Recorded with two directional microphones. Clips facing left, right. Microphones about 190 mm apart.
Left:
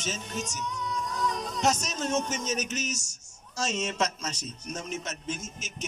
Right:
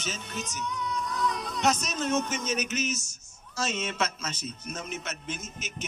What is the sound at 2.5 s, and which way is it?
A man's voice, 40° left (ahead or behind).